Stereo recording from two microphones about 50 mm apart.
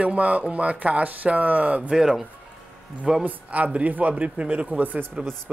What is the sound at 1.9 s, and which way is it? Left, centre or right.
Speech, centre.